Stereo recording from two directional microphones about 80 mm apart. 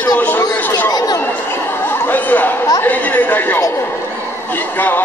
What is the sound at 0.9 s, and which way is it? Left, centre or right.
Chatter, left.